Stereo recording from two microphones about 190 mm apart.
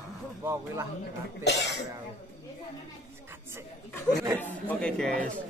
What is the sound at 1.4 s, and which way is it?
Speech, 65° left (ahead or behind).